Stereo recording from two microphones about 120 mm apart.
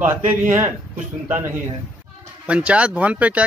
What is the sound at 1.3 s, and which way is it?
Speech, 20° right (ahead or behind).